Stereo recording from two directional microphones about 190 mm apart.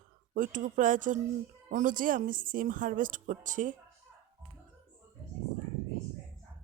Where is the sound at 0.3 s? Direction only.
45° right (ahead or behind).